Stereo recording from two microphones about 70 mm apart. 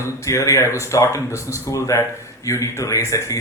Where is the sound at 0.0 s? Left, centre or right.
Left.